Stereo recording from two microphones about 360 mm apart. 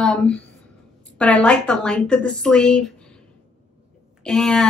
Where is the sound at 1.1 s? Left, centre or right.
Centre.